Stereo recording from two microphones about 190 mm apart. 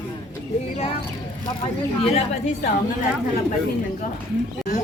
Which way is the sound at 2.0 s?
35° left (ahead or behind).